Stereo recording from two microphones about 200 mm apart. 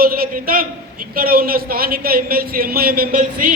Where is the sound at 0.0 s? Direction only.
45° right (ahead or behind).